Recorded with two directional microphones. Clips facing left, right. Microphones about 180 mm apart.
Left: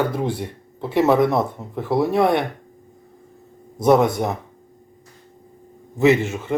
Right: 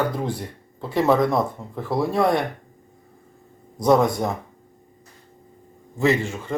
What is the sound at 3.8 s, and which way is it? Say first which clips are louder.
Speech: left 2 dB; 20° left (ahead or behind).